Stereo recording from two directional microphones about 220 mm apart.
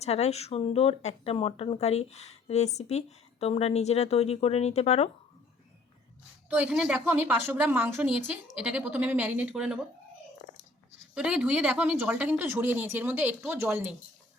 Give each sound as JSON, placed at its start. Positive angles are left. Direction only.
{"t": 0.0, "sound": "speech", "side_deg": 30}
{"t": 6.5, "sound": "a woman's voice", "side_deg": -5}
{"t": 11.1, "sound": "a woman's voice", "side_deg": -5}